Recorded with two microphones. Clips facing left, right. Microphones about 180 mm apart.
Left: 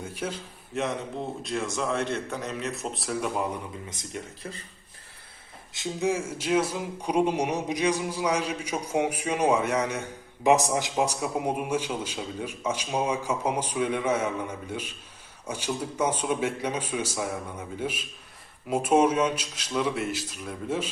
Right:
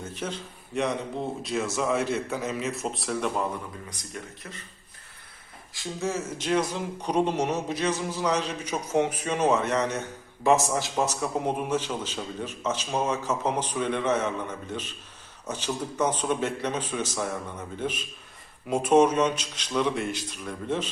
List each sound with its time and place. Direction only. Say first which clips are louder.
0.0 s a man's voice: even; 10° left (ahead or behind)
3.8 s speech: left 2 dB; 25° left (ahead or behind)
5.7 s speech: left 3 dB; 20° left (ahead or behind)